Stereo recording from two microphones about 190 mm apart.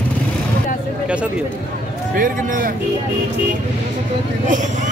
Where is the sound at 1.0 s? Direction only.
5° right (ahead or behind).